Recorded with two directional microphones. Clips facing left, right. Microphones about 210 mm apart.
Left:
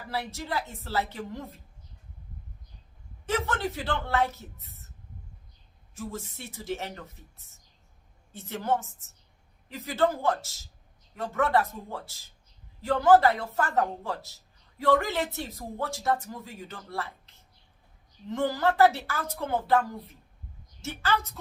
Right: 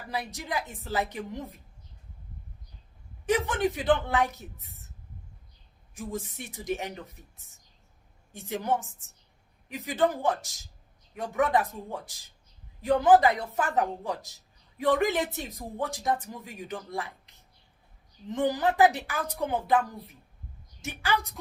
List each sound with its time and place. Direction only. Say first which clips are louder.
0.1 s speech: left 1 dB; 15° right (ahead or behind)
3.2 s speech: right 3 dB; 15° right (ahead or behind)
5.9 s speech: right 2 dB; 15° right (ahead or behind)